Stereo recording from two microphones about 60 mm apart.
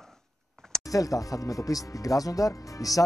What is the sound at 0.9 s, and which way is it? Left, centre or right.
Speech, left.